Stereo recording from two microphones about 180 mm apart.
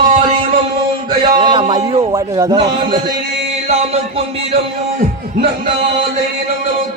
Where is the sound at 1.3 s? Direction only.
25° right (ahead or behind).